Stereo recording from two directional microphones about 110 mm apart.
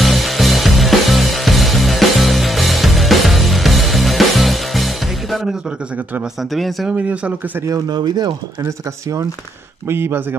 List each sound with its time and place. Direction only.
0.0 s music: centre (ahead or behind)
6.5 s speech: centre (ahead or behind)
6.9 s speech: 15° right (ahead or behind)
7.6 s speech: 35° right (ahead or behind)
8.6 s speech: 30° right (ahead or behind)